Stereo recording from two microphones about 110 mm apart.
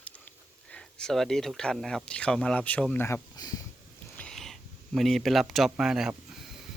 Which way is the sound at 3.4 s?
35° left (ahead or behind).